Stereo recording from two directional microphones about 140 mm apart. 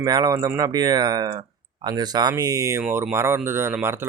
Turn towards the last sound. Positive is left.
turn(degrees=-15)  # may be behind; listen again after turning